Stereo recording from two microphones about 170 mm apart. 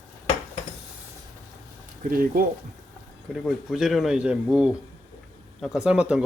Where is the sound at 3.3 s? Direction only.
Centre (ahead or behind).